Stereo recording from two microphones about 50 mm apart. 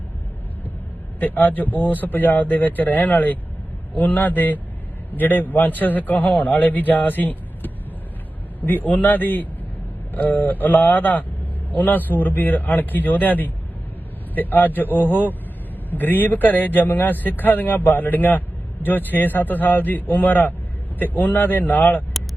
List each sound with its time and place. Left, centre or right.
1.2 s speech: left